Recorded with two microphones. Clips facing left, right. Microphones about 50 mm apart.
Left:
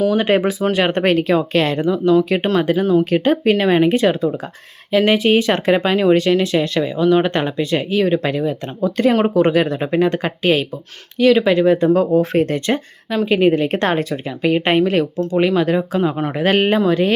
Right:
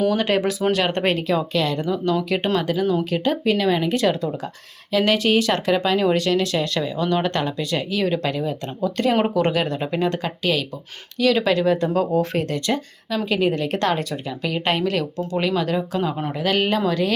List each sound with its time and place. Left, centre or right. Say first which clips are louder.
0.1 s speech: left 4 dB; centre; by 1.8 s left
1.8 s speech: left 7 dB; left
11.2 s speech: left 6 dB; centre
16.3 s speech: left 5 dB; left